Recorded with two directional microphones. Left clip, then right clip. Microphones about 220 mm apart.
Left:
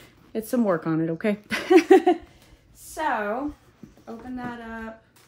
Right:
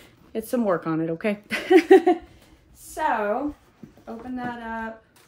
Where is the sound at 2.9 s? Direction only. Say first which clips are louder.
Right 2 dB; 10° left (ahead or behind).